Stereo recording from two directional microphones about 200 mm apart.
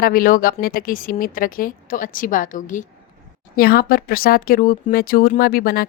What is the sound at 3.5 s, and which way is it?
Speech, 50° left (ahead or behind).